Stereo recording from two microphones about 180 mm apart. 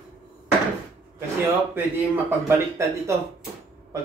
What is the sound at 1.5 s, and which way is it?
Speech, 10° right (ahead or behind).